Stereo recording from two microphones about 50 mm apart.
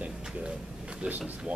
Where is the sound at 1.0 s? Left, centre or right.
Right.